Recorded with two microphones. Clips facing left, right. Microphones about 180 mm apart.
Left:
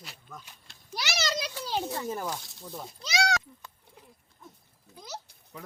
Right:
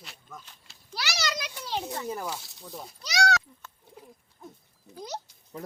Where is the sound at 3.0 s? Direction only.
15° left (ahead or behind).